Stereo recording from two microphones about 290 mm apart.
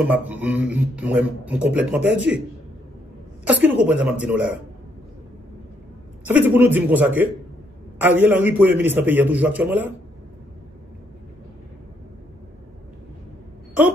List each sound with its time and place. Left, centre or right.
0.0 s a man's voice: centre
3.4 s a man's voice: centre
6.2 s a man's voice: centre